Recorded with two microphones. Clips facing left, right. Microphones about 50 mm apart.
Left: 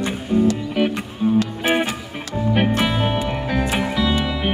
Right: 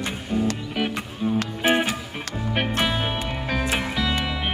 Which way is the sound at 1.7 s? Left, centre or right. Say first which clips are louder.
Left 1 dB; centre.